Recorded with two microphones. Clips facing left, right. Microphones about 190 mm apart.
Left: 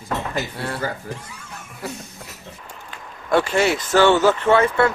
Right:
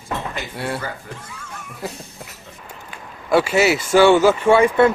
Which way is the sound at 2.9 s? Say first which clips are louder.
Right 2 dB; 10° right (ahead or behind).